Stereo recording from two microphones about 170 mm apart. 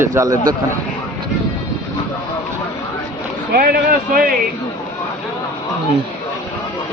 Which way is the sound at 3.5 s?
60° right (ahead or behind).